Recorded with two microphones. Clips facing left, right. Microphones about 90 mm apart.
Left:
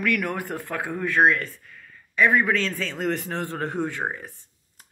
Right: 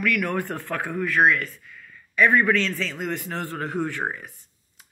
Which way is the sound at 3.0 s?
35° left (ahead or behind).